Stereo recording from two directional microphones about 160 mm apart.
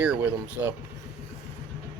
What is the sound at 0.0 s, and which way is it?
Speech, 10° right (ahead or behind).